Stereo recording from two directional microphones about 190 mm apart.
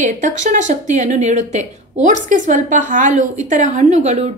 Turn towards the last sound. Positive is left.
turn(degrees=-35)  # may be behind; listen again after turning